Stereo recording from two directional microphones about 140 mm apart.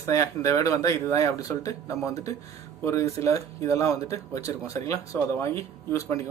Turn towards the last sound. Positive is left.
turn(degrees=20)  # may be behind; listen again after turning